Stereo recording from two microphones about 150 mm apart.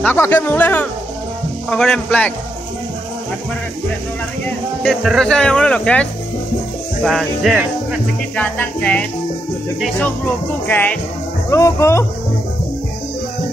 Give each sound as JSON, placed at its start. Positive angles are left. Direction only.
{"t": 0.0, "sound": "speech", "side_deg": 15}
{"t": 4.8, "sound": "speech", "side_deg": 0}
{"t": 8.4, "sound": "speech", "side_deg": 10}